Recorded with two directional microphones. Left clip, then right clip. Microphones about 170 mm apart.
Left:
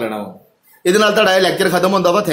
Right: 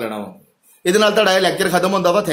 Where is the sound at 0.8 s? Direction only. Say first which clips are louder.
Left 2 dB; 5° right (ahead or behind).